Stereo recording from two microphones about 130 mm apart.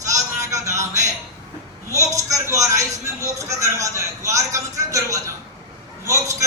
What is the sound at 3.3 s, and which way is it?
Speech, 25° right (ahead or behind).